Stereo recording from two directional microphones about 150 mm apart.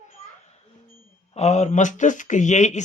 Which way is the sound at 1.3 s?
50° left (ahead or behind).